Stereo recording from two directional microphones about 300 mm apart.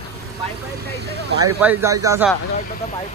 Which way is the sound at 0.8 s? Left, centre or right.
Right.